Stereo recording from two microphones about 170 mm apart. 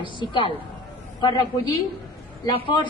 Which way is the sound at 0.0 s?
30° left (ahead or behind).